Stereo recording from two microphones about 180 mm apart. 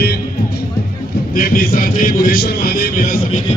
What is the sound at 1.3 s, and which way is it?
A man's voice, 50° left (ahead or behind).